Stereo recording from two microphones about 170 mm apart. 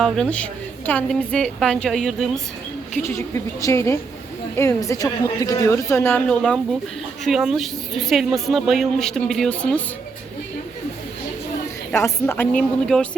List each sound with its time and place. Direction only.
0.0 s speech: 5° left (ahead or behind)
3.0 s a woman's voice: 15° left (ahead or behind)
11.9 s a woman's voice: 15° left (ahead or behind)